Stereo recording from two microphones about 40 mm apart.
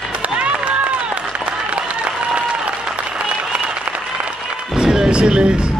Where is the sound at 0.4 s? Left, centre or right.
Right.